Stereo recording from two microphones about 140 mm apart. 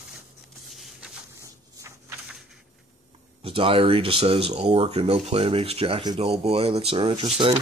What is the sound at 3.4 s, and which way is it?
Speech, 40° right (ahead or behind).